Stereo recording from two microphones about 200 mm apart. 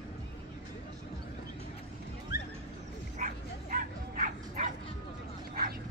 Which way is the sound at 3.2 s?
40° right (ahead or behind).